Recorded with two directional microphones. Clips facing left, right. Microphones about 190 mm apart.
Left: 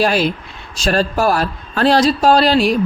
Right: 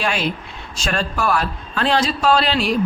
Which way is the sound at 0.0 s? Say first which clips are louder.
Left 6 dB; 40° left (ahead or behind).